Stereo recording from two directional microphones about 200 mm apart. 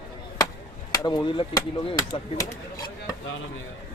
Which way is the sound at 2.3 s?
20° left (ahead or behind).